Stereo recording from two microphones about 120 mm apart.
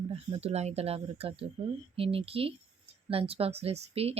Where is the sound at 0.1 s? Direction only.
55° right (ahead or behind).